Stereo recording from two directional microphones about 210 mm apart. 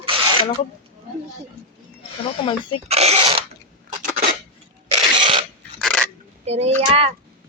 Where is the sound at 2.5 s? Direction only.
25° left (ahead or behind).